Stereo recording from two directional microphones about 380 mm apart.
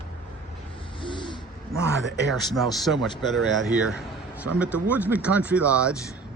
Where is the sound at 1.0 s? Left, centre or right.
Centre.